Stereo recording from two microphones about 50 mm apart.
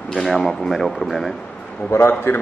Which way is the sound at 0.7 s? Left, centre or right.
Centre.